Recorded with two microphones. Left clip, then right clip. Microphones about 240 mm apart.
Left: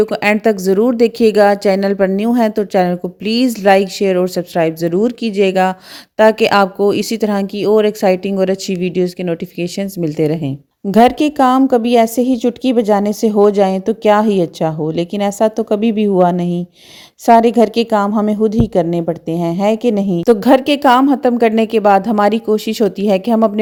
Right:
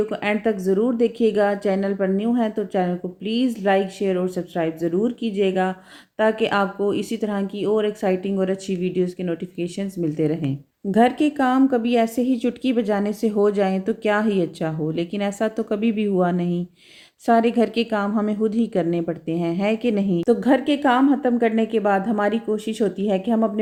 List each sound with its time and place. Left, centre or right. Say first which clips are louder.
0.0 s a woman's voice: left 9 dB; left
20.3 s a woman's voice: left 9 dB; left